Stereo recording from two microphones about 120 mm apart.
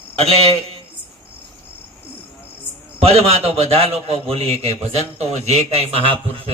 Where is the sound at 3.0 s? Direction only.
55° right (ahead or behind).